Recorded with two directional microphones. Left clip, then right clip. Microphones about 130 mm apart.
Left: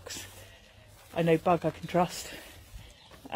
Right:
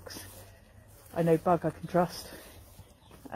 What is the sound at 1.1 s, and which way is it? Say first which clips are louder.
Speech: left 1 dB; 20° left (ahead or behind).